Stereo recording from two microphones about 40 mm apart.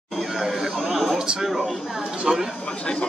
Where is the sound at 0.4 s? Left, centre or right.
Centre.